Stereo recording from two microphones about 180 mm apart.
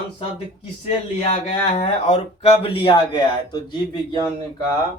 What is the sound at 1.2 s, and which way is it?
Speech, 35° left (ahead or behind).